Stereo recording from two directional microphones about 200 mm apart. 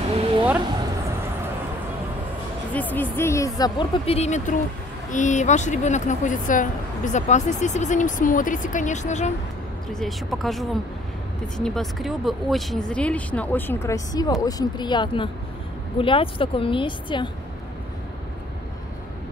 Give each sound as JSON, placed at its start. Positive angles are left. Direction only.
{"t": 2.7, "sound": "speech", "side_deg": 10}
{"t": 9.9, "sound": "speech", "side_deg": 0}